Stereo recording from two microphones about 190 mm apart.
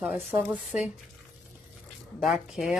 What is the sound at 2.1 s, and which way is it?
Speech, centre (ahead or behind).